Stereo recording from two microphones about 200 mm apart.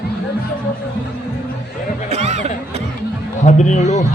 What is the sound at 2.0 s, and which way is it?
Chatter, 35° right (ahead or behind).